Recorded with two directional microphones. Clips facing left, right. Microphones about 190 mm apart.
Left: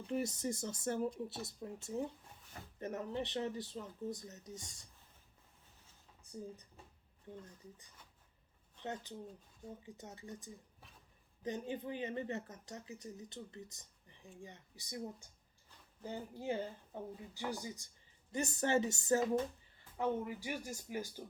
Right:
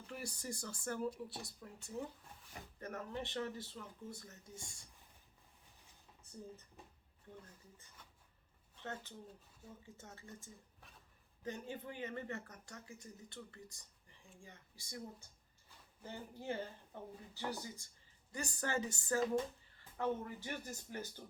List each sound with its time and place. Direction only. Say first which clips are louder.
0.1 s speech: left 9 dB; 20° left (ahead or behind)
8.8 s speech: left 4 dB; 20° left (ahead or behind)
16.0 s speech: left 4 dB; 15° left (ahead or behind)